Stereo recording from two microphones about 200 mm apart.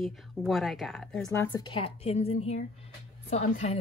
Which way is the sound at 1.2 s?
15° left (ahead or behind).